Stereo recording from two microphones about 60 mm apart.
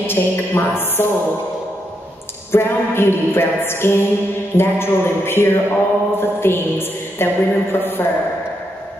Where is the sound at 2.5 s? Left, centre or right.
Left.